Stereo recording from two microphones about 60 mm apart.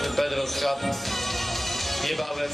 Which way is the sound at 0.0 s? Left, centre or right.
Centre.